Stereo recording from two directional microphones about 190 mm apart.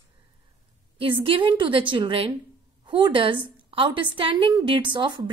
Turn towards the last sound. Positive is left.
turn(degrees=-25)  # may be behind; listen again after turning